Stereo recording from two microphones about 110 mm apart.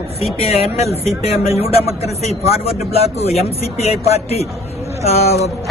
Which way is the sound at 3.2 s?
75° left (ahead or behind).